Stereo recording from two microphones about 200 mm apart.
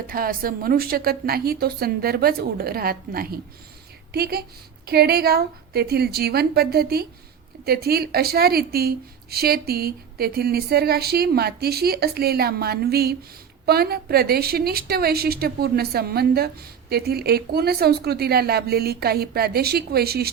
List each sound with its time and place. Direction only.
0.1 s a woman's voice: 45° right (ahead or behind)